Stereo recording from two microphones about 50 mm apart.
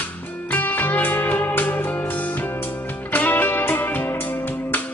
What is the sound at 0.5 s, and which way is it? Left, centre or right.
Music, left.